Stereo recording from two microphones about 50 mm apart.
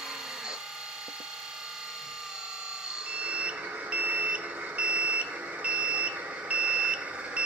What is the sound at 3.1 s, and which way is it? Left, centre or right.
Smoke detector, right.